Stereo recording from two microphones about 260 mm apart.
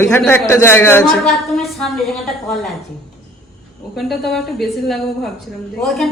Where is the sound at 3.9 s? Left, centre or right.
Centre.